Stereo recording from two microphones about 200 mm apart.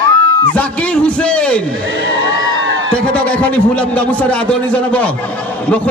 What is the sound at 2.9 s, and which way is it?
A man's voice, 5° left (ahead or behind).